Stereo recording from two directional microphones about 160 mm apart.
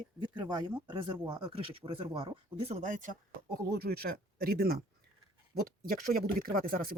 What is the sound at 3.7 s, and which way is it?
Speech, 75° right (ahead or behind).